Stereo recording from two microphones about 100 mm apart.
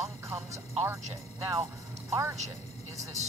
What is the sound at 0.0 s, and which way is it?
Speech, 30° right (ahead or behind).